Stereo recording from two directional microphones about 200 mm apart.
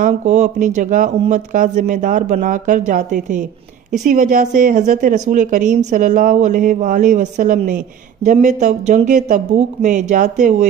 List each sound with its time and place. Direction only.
0.0 s a woman's voice: 35° right (ahead or behind)